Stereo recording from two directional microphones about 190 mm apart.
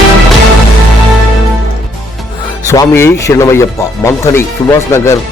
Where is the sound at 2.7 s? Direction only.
15° left (ahead or behind).